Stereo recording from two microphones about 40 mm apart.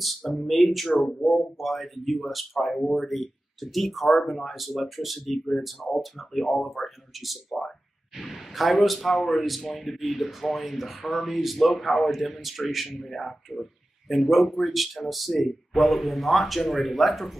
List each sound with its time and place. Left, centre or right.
0.3 s speech: centre
1.0 s speech: centre
1.6 s speech: centre